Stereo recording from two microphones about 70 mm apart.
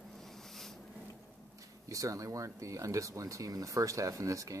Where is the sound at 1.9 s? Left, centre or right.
Right.